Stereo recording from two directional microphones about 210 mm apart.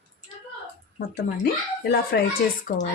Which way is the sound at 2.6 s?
40° left (ahead or behind).